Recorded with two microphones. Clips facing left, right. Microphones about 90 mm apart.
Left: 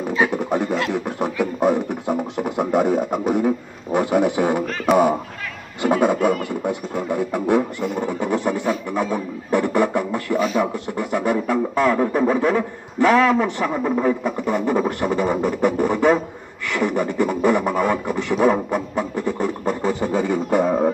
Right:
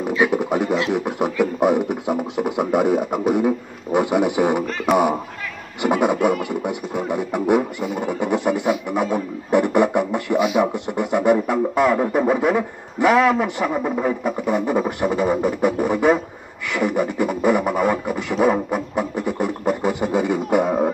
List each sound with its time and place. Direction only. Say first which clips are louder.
0.3 s a sound: right 2 dB; 15° right (ahead or behind)
0.9 s music: right 2 dB; 15° right (ahead or behind)
4.9 s speech: left 1 dB; centre (ahead or behind)
5.8 s music: even; 15° right (ahead or behind)